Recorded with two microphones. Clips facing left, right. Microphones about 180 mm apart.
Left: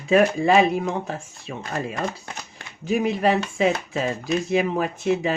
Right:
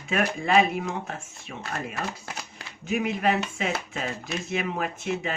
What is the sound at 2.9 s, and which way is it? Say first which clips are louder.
Speech: left 4 dB; 35° left (ahead or behind).